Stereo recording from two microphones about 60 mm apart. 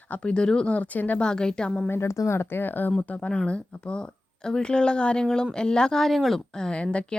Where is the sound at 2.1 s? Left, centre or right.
Left.